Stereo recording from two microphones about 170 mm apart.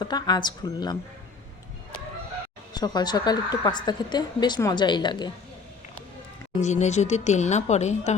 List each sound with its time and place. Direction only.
0.0 s a woman's voice: 25° left (ahead or behind)
2.7 s a woman's voice: 25° left (ahead or behind)
6.6 s speech: 45° left (ahead or behind)